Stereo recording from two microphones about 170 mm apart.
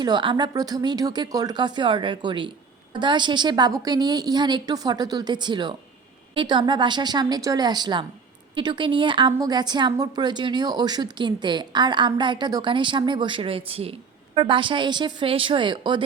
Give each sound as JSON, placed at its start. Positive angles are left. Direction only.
{"t": 0.0, "sound": "a woman's voice", "side_deg": -25}